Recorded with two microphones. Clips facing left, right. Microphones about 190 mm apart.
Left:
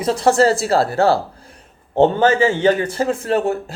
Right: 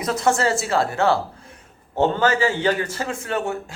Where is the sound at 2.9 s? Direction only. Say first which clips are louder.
Left 7 dB; 35° left (ahead or behind).